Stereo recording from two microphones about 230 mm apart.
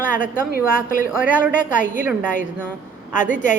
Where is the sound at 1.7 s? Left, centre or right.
Left.